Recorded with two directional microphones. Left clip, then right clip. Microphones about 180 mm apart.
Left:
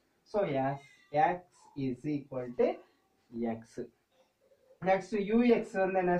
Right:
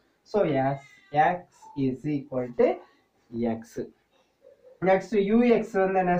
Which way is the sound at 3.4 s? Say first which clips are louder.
Right 7 dB; 25° right (ahead or behind).